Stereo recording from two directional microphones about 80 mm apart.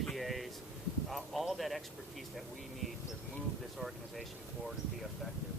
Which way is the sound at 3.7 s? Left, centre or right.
Centre.